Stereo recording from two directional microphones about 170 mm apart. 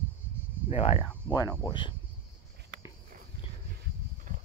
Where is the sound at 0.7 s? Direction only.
35° left (ahead or behind).